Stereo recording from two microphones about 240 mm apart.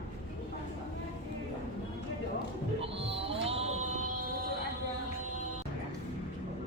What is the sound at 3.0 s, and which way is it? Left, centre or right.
Music, right.